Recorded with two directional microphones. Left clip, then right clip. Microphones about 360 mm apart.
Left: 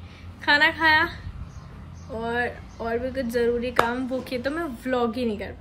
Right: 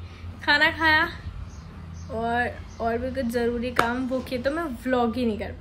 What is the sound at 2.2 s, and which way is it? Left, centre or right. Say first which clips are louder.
Speech: right 1 dB; centre.